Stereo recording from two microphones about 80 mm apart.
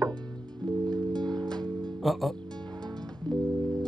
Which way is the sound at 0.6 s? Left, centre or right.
Right.